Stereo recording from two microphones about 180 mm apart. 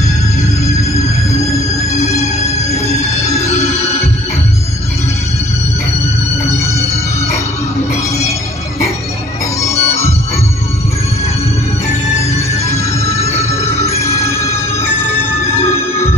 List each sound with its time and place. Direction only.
9.6 s music: 15° left (ahead or behind)
12.2 s music: 15° left (ahead or behind)